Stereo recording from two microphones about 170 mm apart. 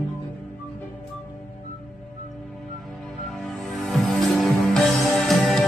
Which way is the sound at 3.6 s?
Centre (ahead or behind).